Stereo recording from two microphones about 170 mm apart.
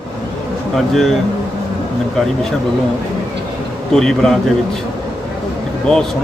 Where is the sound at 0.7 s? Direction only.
Centre (ahead or behind).